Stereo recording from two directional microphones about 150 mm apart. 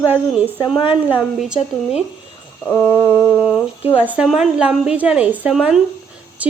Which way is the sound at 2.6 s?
10° left (ahead or behind).